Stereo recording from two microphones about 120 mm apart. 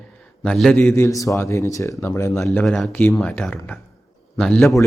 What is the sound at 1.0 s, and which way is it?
Speech, 25° left (ahead or behind).